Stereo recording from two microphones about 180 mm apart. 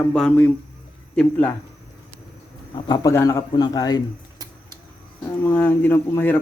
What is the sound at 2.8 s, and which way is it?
Speech, 20° left (ahead or behind).